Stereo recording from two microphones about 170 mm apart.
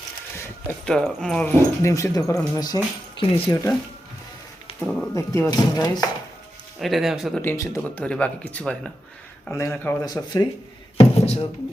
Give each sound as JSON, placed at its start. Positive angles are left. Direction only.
{"t": 0.9, "sound": "speech", "side_deg": 5}
{"t": 4.8, "sound": "a sound", "side_deg": 0}
{"t": 5.1, "sound": "speech", "side_deg": 20}
{"t": 6.7, "sound": "speech", "side_deg": 0}
{"t": 7.4, "sound": "speech", "side_deg": 15}
{"t": 7.8, "sound": "speech", "side_deg": 5}
{"t": 9.5, "sound": "speech", "side_deg": 15}
{"t": 10.1, "sound": "speech", "side_deg": 25}
{"t": 10.9, "sound": "speech", "side_deg": 35}